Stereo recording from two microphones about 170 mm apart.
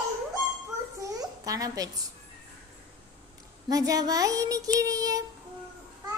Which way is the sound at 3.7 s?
20° right (ahead or behind).